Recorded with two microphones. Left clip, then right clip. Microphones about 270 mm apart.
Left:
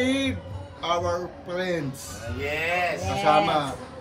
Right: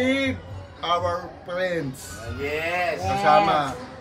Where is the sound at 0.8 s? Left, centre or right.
Centre.